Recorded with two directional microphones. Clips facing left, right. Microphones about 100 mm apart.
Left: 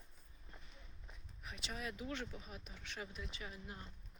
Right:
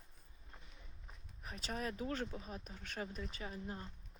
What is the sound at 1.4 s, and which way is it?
Speech, 40° right (ahead or behind).